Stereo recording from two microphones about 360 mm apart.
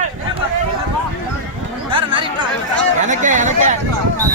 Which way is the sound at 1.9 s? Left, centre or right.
Centre.